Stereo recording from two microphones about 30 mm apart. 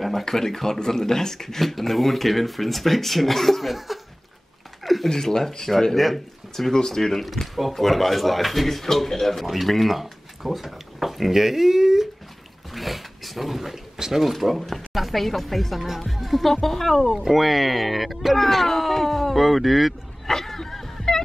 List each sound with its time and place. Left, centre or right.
0.2 s speech: centre
3.7 s chuckle: centre
5.0 s speech: centre
5.9 s speech: centre
6.7 s speech: centre
7.0 s speech: centre
8.8 s speech: centre
12.7 s dog: centre
13.9 s speech: centre
14.2 s speech: centre
17.2 s speech: centre
19.3 s speech: centre
20.2 s a sound: centre